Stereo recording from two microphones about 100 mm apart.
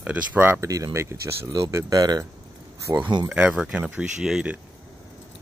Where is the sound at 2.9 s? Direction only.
20° right (ahead or behind).